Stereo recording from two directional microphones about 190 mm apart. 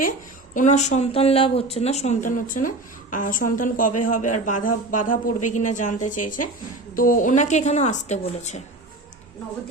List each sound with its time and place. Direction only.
0.5 s speech: 40° left (ahead or behind)